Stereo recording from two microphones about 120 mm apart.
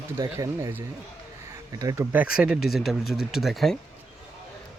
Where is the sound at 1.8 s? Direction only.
30° right (ahead or behind).